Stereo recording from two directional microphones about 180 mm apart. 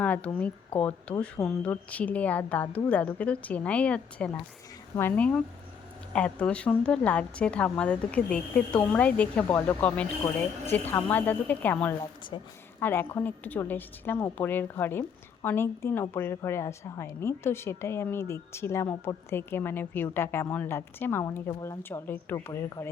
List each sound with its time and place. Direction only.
0.0 s a woman's voice: 5° left (ahead or behind)
11.9 s a woman's voice: 25° left (ahead or behind)
12.8 s a woman's voice: 10° left (ahead or behind)